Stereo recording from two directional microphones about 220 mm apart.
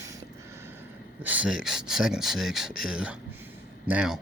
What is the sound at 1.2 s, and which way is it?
Speech, 5° right (ahead or behind).